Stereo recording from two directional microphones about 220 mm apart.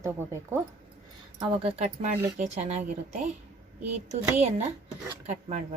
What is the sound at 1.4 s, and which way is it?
A woman's voice, 25° right (ahead or behind).